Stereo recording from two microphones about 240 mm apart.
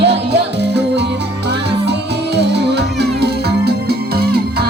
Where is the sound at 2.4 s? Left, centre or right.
Right.